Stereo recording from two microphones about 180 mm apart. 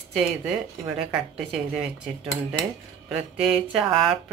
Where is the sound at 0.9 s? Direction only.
5° right (ahead or behind).